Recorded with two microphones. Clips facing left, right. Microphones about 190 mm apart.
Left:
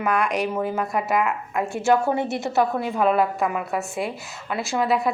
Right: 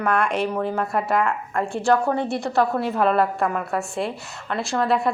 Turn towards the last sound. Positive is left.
turn(degrees=0)  # may be behind; listen again after turning